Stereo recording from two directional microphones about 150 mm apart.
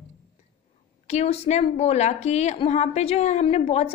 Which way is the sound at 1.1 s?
45° left (ahead or behind).